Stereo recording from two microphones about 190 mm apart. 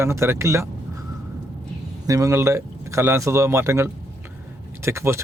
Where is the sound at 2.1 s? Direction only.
15° right (ahead or behind).